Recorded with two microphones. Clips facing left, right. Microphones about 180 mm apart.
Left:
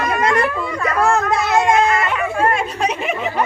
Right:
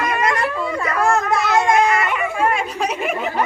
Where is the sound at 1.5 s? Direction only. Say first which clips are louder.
Left 1 dB; 20° left (ahead or behind).